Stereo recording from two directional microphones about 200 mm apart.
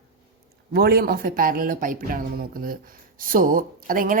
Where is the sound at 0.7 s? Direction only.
50° right (ahead or behind).